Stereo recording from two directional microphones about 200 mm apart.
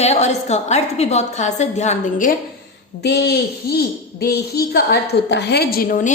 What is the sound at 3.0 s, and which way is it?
A child's voice, 55° left (ahead or behind).